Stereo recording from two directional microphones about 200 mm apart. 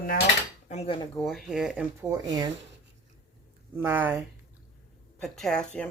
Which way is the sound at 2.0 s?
15° right (ahead or behind).